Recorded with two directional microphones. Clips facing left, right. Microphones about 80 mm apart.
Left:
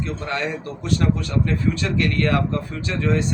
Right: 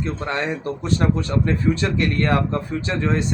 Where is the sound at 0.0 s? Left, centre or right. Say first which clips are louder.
Right 1 dB; right.